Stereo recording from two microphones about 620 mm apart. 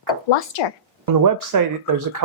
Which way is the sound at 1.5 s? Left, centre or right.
Right.